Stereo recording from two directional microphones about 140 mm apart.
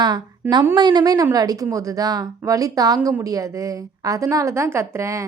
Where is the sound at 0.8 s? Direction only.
30° right (ahead or behind).